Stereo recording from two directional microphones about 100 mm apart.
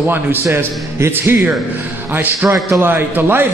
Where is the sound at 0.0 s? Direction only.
20° right (ahead or behind).